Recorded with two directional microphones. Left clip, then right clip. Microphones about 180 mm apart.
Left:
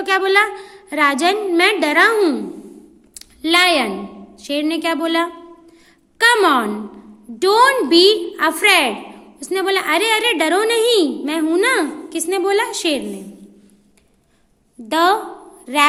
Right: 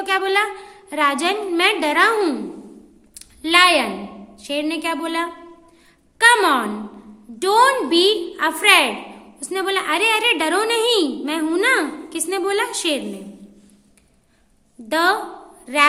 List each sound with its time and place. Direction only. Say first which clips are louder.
0.0 s a woman's voice: left 4 dB; 25° left (ahead or behind)
3.2 s a sound: even; 20° left (ahead or behind)
4.4 s a woman's voice: left 3 dB; 20° left (ahead or behind)
14.8 s a woman's voice: left 3 dB; 20° left (ahead or behind)